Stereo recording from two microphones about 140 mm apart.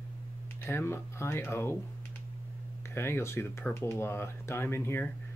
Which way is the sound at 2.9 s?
20° left (ahead or behind).